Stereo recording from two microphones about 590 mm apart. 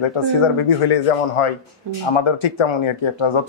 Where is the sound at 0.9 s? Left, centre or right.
Left.